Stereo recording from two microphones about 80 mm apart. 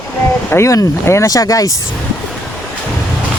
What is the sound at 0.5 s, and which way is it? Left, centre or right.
Speech, left.